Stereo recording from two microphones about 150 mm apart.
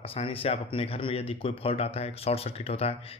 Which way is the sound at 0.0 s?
40° left (ahead or behind).